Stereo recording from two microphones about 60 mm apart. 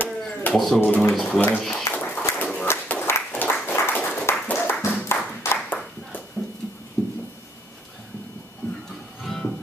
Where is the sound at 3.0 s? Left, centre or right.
Left.